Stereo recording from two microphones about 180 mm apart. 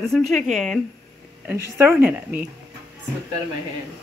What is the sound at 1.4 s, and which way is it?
Speech, 15° right (ahead or behind).